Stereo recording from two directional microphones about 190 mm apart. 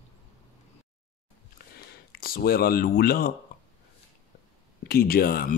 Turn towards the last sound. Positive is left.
turn(degrees=50)  # may be behind; listen again after turning